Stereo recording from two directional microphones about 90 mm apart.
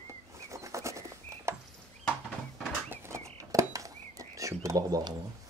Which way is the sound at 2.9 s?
30° right (ahead or behind).